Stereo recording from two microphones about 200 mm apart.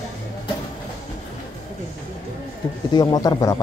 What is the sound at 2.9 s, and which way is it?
Speech, 20° left (ahead or behind).